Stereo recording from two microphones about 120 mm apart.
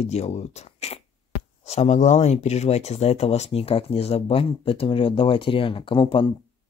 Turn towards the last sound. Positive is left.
turn(degrees=45)  # may be behind; listen again after turning